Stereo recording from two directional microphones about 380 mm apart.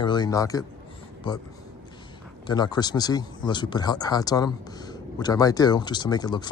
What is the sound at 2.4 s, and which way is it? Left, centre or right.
Speech, centre.